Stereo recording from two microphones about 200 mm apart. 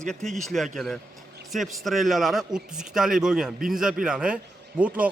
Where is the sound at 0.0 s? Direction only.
5° left (ahead or behind).